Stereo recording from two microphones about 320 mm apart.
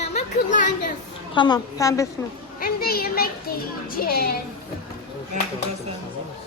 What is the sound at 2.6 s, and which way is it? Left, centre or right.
A child's voice, left.